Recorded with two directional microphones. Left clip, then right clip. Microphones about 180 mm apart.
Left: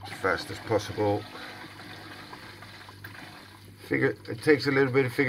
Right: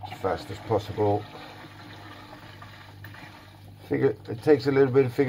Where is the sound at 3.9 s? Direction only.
20° right (ahead or behind).